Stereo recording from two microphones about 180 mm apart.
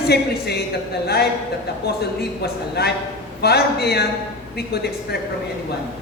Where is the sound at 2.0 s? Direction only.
65° left (ahead or behind).